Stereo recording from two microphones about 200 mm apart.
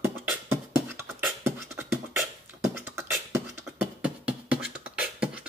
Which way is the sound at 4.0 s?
5° right (ahead or behind).